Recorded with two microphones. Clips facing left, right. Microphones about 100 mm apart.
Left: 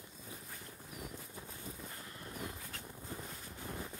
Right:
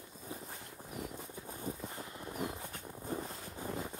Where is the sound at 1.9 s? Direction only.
20° right (ahead or behind).